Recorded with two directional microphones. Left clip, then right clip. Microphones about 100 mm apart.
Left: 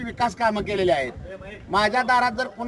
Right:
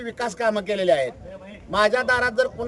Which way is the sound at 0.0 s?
40° right (ahead or behind).